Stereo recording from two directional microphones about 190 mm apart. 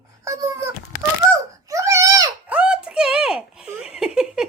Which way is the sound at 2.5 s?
5° right (ahead or behind).